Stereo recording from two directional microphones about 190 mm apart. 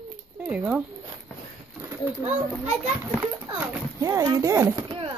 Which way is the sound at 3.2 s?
15° right (ahead or behind).